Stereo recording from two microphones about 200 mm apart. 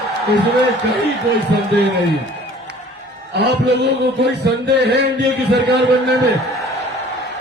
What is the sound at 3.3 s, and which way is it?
A man's voice, 55° right (ahead or behind).